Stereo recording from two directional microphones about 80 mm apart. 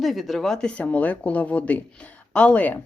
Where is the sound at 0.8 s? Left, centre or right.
Centre.